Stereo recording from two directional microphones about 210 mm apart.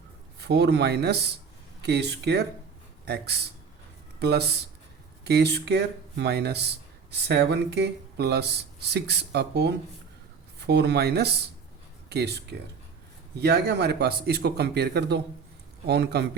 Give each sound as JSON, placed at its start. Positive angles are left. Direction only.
{"t": 0.3, "sound": "speech", "side_deg": -50}